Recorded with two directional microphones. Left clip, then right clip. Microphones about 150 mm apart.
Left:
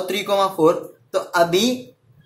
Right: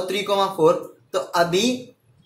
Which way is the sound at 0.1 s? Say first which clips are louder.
Left 2 dB; 20° left (ahead or behind).